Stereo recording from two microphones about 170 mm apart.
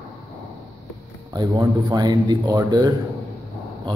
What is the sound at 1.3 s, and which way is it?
A man's voice, 25° right (ahead or behind).